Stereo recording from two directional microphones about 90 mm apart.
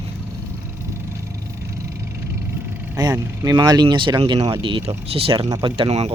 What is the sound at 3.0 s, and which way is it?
Speech, 50° right (ahead or behind).